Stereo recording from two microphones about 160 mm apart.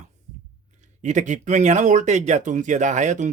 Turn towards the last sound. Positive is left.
turn(degrees=-50)  # may be behind; listen again after turning